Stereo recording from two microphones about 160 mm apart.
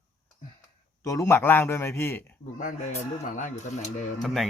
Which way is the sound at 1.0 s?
20° left (ahead or behind).